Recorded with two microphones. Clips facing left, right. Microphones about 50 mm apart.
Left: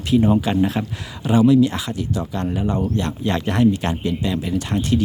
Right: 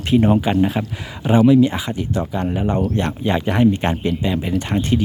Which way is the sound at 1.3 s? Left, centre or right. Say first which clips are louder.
Right 2 dB; right.